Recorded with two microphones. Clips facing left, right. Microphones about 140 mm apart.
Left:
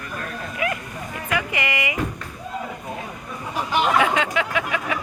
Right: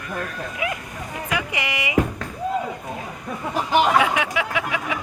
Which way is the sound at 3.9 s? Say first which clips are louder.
Even; 15° right (ahead or behind).